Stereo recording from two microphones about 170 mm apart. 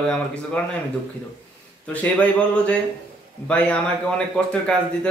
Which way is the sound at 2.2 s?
5° left (ahead or behind).